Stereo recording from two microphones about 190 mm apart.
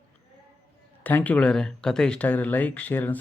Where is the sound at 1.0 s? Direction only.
10° left (ahead or behind).